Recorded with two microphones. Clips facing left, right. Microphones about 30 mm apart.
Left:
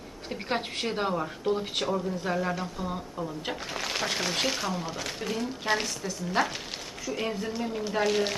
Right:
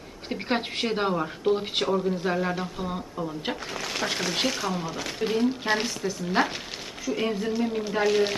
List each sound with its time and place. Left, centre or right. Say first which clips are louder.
0.3 s speech: right 3 dB; centre
3.7 s speech: even; centre
5.2 s speech: right 9 dB; right
5.7 s speech: right 2 dB; centre